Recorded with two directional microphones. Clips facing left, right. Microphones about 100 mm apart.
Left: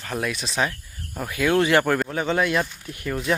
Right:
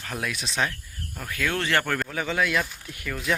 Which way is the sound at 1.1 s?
20° left (ahead or behind).